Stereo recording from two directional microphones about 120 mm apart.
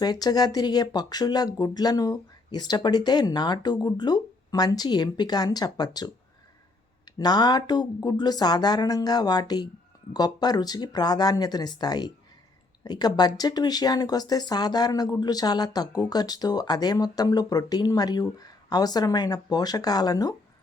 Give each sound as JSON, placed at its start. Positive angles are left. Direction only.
{"t": 0.0, "sound": "speech", "side_deg": 35}
{"t": 7.2, "sound": "speech", "side_deg": 35}